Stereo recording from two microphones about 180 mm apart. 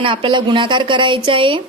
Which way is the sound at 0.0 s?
30° right (ahead or behind).